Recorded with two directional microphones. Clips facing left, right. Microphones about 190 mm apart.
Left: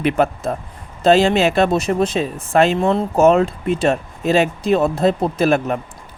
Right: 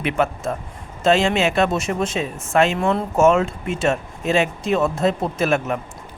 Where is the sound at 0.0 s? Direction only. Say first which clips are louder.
Left 4 dB; 35° left (ahead or behind).